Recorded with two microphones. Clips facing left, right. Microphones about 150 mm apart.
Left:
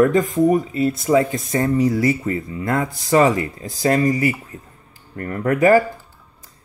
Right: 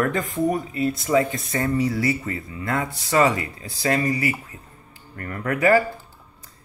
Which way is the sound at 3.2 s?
45° left (ahead or behind).